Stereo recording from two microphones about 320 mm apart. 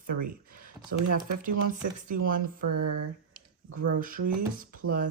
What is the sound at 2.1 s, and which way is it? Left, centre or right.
Speech, right.